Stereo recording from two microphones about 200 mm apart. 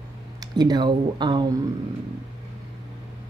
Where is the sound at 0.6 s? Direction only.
20° right (ahead or behind).